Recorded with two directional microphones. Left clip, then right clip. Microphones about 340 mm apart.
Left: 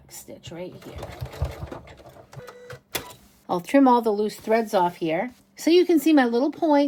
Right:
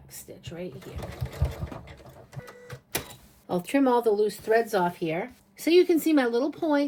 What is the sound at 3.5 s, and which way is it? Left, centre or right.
Speech, centre.